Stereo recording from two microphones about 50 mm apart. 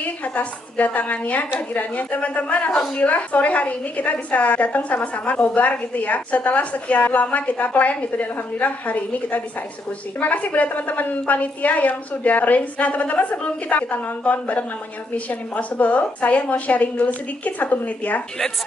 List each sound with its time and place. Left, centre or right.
0.0 s a woman's voice: left